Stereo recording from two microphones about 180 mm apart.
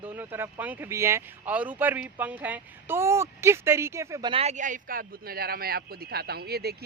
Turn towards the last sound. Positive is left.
turn(degrees=-60)  # may be behind; listen again after turning